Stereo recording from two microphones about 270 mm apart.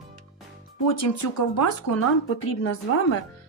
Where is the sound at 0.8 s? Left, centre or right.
Left.